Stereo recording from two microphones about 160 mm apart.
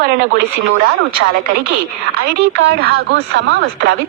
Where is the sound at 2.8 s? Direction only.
75° right (ahead or behind).